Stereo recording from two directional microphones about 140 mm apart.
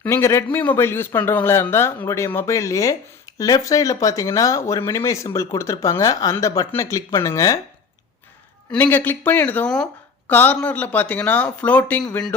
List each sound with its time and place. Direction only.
0.0 s speech: 20° left (ahead or behind)
8.7 s speech: 15° left (ahead or behind)